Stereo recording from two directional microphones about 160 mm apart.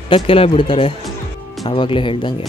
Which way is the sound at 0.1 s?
35° left (ahead or behind).